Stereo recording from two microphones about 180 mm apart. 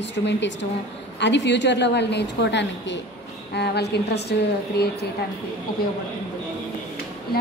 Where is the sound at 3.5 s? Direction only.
65° left (ahead or behind).